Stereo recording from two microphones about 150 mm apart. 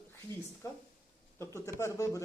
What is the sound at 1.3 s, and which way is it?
Speech, 15° left (ahead or behind).